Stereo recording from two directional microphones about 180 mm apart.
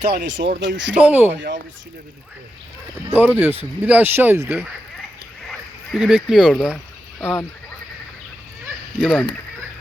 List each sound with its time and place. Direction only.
0.1 s speech: 80° right
0.9 s speech: 10° right (ahead or behind)
3.2 s speech: 10° right (ahead or behind); by 7.4 s 10° left (ahead or behind)
9.0 s speech: 5° left (ahead or behind)